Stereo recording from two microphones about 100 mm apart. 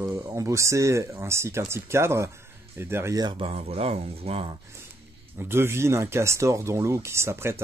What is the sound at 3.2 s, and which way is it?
Speech, 50° right (ahead or behind).